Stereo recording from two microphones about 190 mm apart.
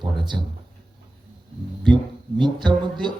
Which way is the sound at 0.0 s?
25° right (ahead or behind).